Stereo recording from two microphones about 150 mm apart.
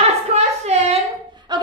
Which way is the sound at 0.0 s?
45° right (ahead or behind).